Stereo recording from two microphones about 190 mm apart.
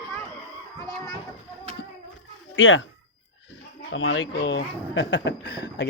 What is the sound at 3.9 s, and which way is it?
Speech, 80° left.